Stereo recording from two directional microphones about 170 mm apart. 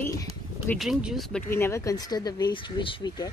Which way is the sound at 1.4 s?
15° left (ahead or behind).